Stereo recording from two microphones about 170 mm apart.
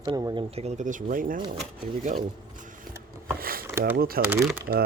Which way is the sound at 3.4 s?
60° right (ahead or behind).